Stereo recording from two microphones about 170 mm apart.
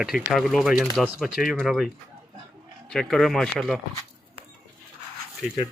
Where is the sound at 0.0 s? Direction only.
Centre (ahead or behind).